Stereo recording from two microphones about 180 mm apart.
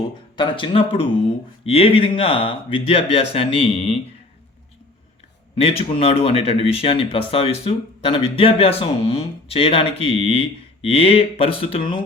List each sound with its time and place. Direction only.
0.3 s speech: 30° left (ahead or behind)
5.5 s speech: 35° left (ahead or behind)